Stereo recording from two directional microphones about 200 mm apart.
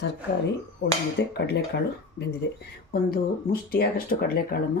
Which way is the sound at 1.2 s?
55° left (ahead or behind).